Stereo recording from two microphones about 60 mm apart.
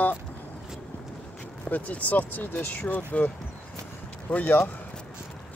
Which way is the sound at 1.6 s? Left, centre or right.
Left.